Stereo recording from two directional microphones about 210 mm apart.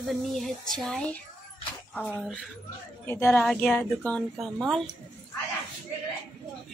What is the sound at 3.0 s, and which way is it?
A woman's voice, 10° left (ahead or behind).